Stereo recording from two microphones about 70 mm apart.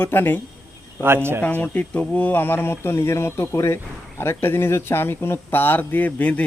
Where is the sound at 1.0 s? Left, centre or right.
Right.